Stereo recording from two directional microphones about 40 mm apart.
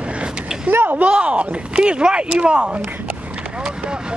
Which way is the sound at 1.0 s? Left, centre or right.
Right.